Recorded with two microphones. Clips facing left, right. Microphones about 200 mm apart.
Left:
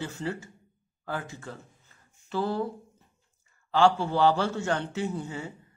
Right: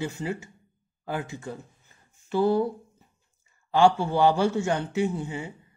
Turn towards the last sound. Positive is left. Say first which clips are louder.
# right 3 dB
turn(degrees=-10)  # may be behind; listen again after turning